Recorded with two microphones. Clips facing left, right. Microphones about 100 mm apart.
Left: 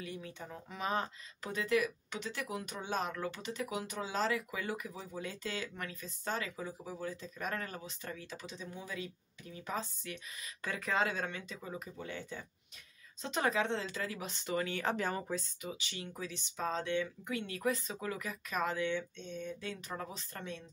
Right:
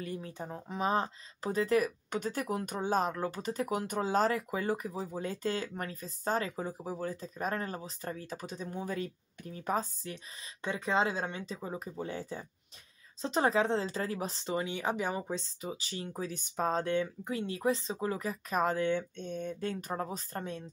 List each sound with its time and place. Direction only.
0.0 s speech: 40° right (ahead or behind)
14.6 s speech: 15° right (ahead or behind)
15.3 s speech: 30° right (ahead or behind)